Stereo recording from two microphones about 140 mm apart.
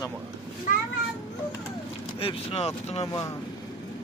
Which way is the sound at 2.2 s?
45° left (ahead or behind).